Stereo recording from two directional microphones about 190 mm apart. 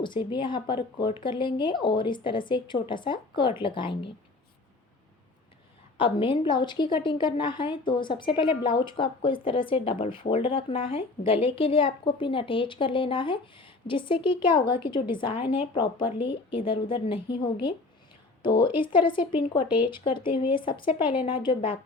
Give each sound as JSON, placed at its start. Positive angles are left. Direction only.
{"t": 0.0, "sound": "a woman's voice", "side_deg": 25}
{"t": 6.0, "sound": "a woman's voice", "side_deg": 30}